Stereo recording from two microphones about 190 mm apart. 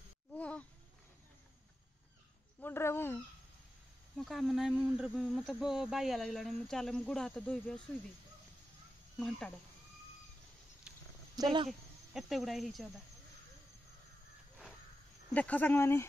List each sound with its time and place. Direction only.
0.3 s a sound: 5° left (ahead or behind)
2.6 s speech: 10° left (ahead or behind)
4.2 s speech: centre (ahead or behind)
10.9 s a sound: 5° right (ahead or behind)
11.3 s speech: 25° right (ahead or behind)
12.1 s speech: centre (ahead or behind)
15.3 s speech: 10° left (ahead or behind)